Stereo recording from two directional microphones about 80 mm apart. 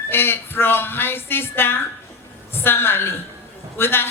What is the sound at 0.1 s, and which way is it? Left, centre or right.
Speech, left.